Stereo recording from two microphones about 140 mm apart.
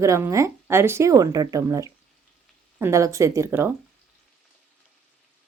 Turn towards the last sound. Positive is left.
turn(degrees=-15)  # may be behind; listen again after turning